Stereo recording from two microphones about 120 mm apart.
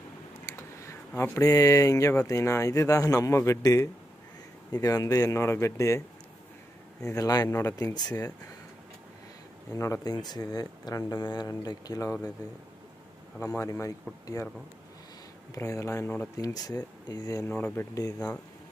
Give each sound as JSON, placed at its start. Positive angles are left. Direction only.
{"t": 0.5, "sound": "a sound", "side_deg": 25}
{"t": 1.4, "sound": "a man's voice", "side_deg": 30}
{"t": 9.7, "sound": "speech", "side_deg": 25}
{"t": 13.6, "sound": "a man's voice", "side_deg": 25}
{"t": 15.5, "sound": "a man's voice", "side_deg": 25}
{"t": 16.3, "sound": "speech", "side_deg": 30}
{"t": 17.6, "sound": "speech", "side_deg": 15}
{"t": 17.9, "sound": "a man's voice", "side_deg": 30}